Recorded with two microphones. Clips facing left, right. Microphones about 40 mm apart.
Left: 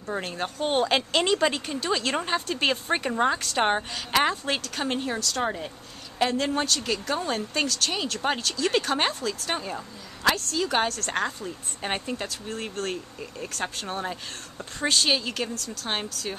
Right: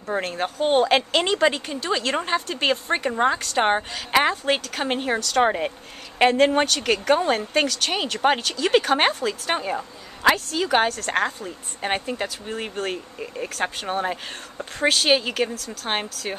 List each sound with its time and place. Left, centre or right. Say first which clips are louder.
0.0 s speech: right 5 dB; centre; by 7.2 s right
7.2 s speech: right 6 dB; right